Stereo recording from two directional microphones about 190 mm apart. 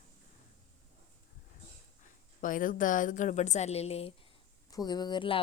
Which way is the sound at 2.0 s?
45° left (ahead or behind).